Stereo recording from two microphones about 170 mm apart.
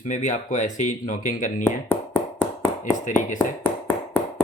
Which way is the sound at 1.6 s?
10° left (ahead or behind).